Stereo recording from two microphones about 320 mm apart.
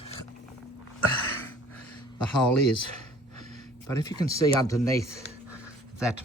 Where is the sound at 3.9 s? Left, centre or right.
Centre.